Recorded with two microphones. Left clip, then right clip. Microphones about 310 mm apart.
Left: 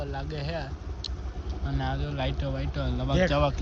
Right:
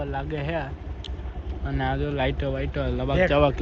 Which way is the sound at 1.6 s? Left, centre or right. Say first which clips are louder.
Right 6 dB; centre.